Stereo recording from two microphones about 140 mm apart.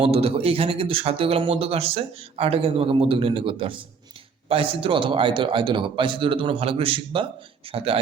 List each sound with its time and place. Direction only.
0.0 s a man's voice: 45° right (ahead or behind)